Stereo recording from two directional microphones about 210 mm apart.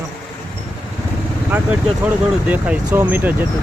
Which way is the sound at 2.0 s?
5° right (ahead or behind).